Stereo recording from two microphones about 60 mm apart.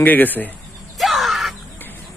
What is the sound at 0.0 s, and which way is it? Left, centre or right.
Speech, left.